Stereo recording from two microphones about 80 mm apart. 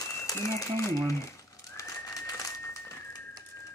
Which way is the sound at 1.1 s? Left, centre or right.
Left.